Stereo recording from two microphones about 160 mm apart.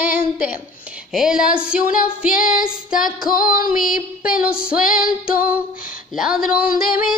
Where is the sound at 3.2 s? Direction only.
60° left (ahead or behind).